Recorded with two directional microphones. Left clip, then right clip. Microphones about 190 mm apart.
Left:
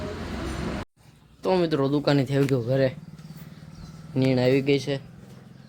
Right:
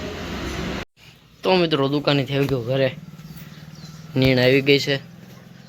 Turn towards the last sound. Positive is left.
turn(degrees=0)  # may be behind; listen again after turning